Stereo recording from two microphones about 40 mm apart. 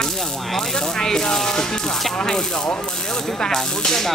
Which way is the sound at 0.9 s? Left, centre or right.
Centre.